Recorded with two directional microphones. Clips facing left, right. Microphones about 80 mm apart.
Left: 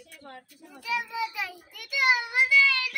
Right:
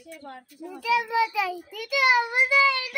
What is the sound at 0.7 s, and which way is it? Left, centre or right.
A child's voice, right.